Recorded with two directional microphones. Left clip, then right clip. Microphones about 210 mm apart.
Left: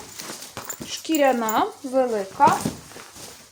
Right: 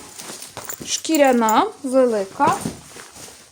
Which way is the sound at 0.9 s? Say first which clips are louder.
Right 4 dB; 55° right (ahead or behind).